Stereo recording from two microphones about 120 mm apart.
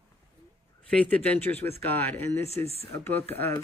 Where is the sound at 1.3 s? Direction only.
15° left (ahead or behind).